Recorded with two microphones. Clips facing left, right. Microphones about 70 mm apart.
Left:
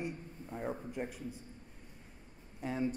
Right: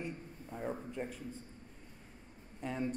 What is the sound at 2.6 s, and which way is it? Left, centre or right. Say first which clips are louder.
Speech: left 2 dB; centre.